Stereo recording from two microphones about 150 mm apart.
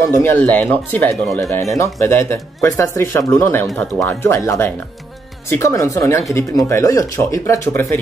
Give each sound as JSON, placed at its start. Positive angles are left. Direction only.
{"t": 0.0, "sound": "speech", "side_deg": 15}